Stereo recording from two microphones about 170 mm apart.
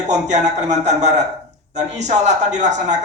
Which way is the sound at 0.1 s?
45° right (ahead or behind).